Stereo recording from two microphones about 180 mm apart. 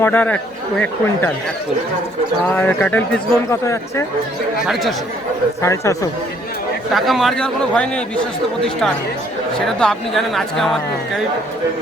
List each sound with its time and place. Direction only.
0.0 s speech: 10° left (ahead or behind)
2.5 s speech: 10° left (ahead or behind)
4.6 s a man's voice: centre (ahead or behind)
5.6 s speech: 15° left (ahead or behind)
6.9 s a man's voice: centre (ahead or behind)
9.6 s a man's voice: 5° left (ahead or behind)